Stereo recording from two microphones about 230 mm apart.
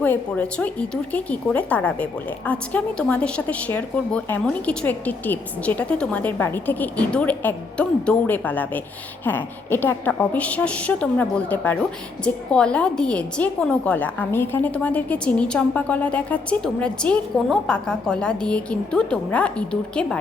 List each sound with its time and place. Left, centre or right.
0.0 s a woman's voice: centre